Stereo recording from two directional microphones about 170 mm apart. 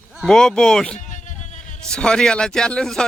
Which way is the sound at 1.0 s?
45° left (ahead or behind).